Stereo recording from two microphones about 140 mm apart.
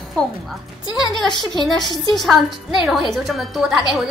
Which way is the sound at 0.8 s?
30° left (ahead or behind).